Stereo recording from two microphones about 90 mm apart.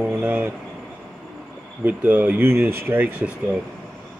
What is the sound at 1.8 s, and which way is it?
Speech, 20° right (ahead or behind).